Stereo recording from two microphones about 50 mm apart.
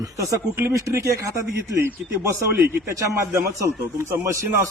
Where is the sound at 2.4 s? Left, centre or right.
Right.